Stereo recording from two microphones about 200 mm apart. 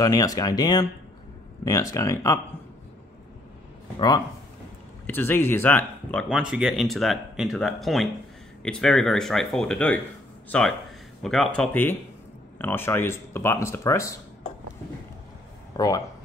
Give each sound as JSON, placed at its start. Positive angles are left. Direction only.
{"t": 0.0, "sound": "speech", "side_deg": 15}
{"t": 5.0, "sound": "speech", "side_deg": 10}